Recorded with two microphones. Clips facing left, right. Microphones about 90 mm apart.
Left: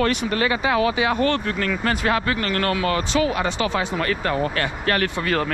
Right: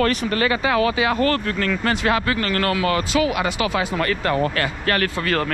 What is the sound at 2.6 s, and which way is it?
Speech, 90° right.